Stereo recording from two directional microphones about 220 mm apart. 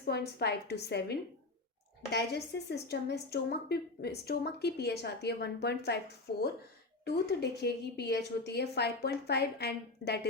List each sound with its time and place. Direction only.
0.0 s a woman's voice: 45° left (ahead or behind)
2.1 s a woman's voice: 50° left (ahead or behind)